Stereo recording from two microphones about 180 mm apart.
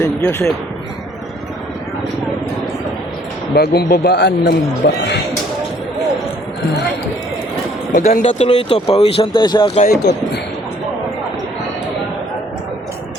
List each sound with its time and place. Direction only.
0.0 s speech: 10° left (ahead or behind)
3.5 s speech: 60° left (ahead or behind)
7.9 s speech: 40° left (ahead or behind)
9.8 s speech: 65° left (ahead or behind)